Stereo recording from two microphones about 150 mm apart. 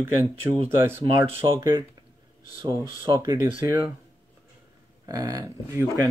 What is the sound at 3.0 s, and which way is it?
Speech, 20° right (ahead or behind).